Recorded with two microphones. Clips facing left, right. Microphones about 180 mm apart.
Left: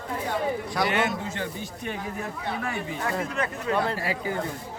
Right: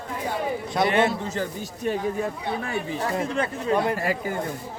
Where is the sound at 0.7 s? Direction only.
25° right (ahead or behind).